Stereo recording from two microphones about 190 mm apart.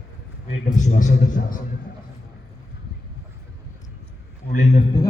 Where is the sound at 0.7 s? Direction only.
40° left (ahead or behind).